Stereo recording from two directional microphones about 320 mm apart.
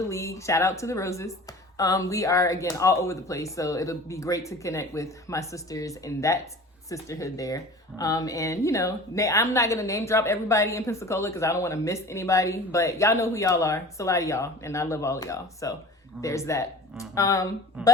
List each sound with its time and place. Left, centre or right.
0.1 s speech: centre
17.8 s speech: centre